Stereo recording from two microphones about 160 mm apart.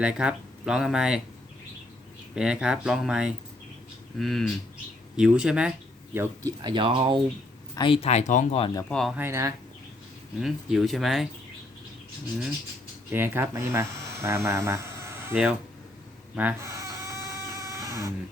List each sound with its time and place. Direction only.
0.0 s speech: 5° right (ahead or behind)
2.3 s speech: 5° right (ahead or behind)
6.1 s speech: 25° right (ahead or behind)
7.8 s speech: 35° left (ahead or behind); by 8.6 s 50° left (ahead or behind)
8.9 s speech: centre (ahead or behind)
9.1 s speech: 15° right (ahead or behind)
10.4 s speech: centre (ahead or behind)
13.1 s speech: 15° right (ahead or behind)
16.3 s a sound: 10° right (ahead or behind)